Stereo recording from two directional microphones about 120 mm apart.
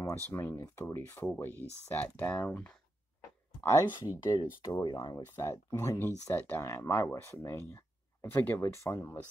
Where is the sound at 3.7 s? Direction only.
30° left (ahead or behind).